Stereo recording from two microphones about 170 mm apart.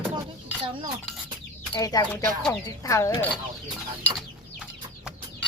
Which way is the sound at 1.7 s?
20° left (ahead or behind).